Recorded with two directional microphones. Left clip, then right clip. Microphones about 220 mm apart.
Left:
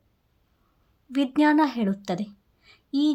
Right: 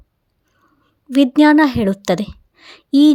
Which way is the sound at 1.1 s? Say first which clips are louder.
Right 10 dB; 30° right (ahead or behind).